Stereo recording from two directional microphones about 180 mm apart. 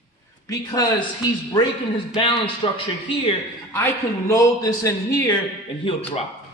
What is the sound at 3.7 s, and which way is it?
A man's voice, 15° left (ahead or behind).